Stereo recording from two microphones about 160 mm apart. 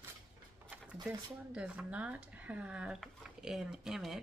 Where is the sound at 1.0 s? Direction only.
5° right (ahead or behind).